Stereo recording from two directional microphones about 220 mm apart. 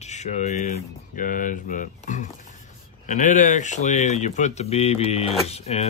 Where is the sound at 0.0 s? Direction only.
30° left (ahead or behind).